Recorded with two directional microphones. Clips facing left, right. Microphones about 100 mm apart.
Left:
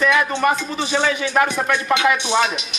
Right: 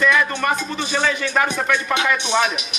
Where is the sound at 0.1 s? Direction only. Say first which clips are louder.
Left 2 dB; 10° left (ahead or behind).